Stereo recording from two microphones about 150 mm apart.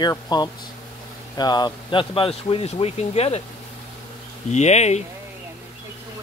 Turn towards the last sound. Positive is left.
turn(degrees=50)  # may be behind; listen again after turning